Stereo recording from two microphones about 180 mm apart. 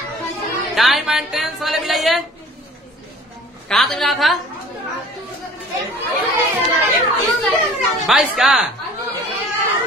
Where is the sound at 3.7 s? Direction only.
Centre (ahead or behind).